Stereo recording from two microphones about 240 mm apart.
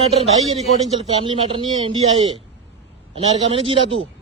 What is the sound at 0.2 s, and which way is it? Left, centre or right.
A man's voice, right.